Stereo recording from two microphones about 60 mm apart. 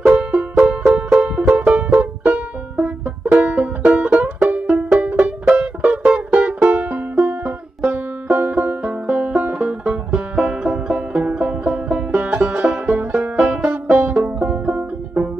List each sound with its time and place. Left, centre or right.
0.0 s music: right
1.6 s banjo: centre
5.0 s music: right
8.8 s banjo: right
9.4 s music: right
12.8 s music: right
13.2 s banjo: centre